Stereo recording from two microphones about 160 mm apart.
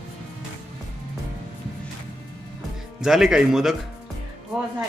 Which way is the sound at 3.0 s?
Centre (ahead or behind).